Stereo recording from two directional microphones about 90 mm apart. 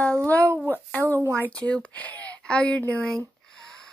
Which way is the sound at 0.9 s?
15° left (ahead or behind).